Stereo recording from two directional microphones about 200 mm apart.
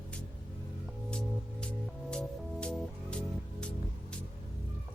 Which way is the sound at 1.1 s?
5° left (ahead or behind).